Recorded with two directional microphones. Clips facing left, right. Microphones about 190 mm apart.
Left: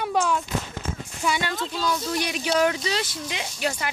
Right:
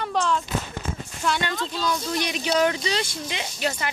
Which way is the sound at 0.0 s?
10° left (ahead or behind).